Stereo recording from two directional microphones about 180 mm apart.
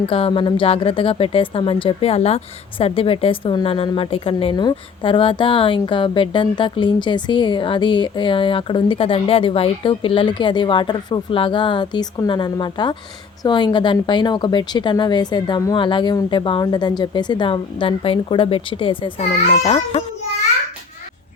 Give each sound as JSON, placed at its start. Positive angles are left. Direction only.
{"t": 0.1, "sound": "a woman's voice", "side_deg": 30}